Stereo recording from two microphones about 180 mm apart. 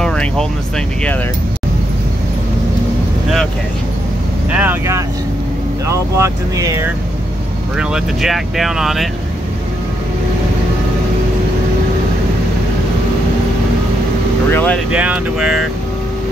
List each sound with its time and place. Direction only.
0.0 s speech: 5° left (ahead or behind)
4.5 s speech: 10° right (ahead or behind)
7.7 s speech: 5° right (ahead or behind)
14.5 s speech: 10° left (ahead or behind)
14.9 s speech: 5° right (ahead or behind)